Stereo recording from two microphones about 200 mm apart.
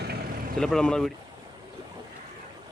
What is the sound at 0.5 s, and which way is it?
Speech, 5° left (ahead or behind).